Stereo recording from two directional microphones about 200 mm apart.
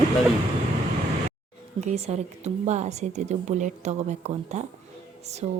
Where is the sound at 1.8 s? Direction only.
35° right (ahead or behind).